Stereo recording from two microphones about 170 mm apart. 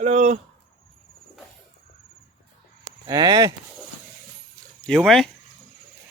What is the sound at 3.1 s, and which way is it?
Speech, 25° right (ahead or behind).